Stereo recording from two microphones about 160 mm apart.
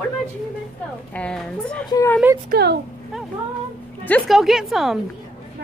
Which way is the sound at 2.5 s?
90° right.